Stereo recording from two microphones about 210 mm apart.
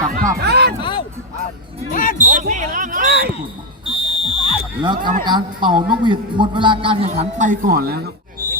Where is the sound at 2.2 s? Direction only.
35° right (ahead or behind).